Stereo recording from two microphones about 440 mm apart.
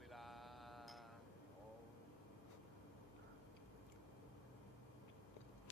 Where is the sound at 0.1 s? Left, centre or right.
Centre.